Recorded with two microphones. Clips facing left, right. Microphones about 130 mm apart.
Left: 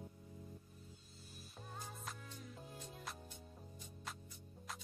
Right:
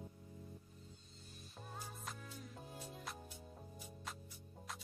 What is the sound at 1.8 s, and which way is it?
Music, centre (ahead or behind).